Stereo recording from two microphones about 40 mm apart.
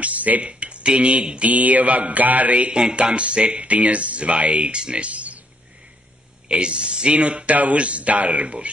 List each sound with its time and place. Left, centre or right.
0.0 s a sound: right
0.5 s speech: right
1.5 s speech: right
2.7 s speech: right
6.5 s speech: right